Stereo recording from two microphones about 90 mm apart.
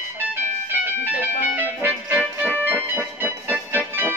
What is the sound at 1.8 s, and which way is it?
Music, 20° right (ahead or behind).